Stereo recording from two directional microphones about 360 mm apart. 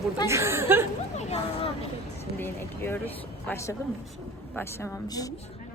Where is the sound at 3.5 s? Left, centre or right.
Centre.